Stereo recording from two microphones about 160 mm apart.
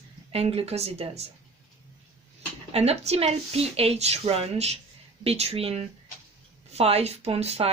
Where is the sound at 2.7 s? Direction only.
40° right (ahead or behind).